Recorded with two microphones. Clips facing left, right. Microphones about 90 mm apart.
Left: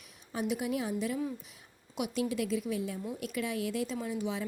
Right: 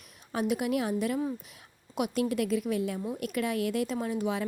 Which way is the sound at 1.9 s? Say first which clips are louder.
Right 4 dB; 50° right (ahead or behind).